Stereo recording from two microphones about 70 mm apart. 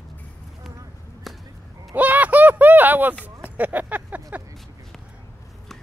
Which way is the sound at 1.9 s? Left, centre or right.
Right.